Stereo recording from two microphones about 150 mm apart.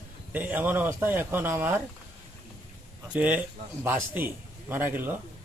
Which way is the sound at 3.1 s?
10° right (ahead or behind).